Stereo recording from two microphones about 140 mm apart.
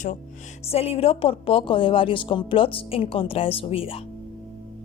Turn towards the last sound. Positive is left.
turn(degrees=40)  # may be behind; listen again after turning